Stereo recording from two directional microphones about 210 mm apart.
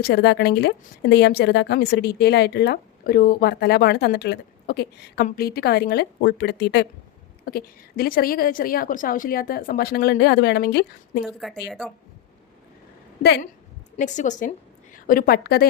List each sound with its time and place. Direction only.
0.0 s speech: 50° left (ahead or behind)
11.4 s speech: centre (ahead or behind)
13.2 s speech: 50° left (ahead or behind)
13.9 s a woman's voice: 35° left (ahead or behind)